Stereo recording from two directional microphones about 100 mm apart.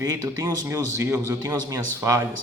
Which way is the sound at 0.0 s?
35° right (ahead or behind).